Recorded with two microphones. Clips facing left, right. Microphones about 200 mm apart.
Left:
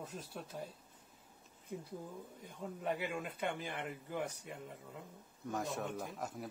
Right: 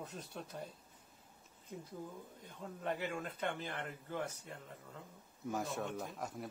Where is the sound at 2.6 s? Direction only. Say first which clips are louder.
Left 1 dB; 10° left (ahead or behind).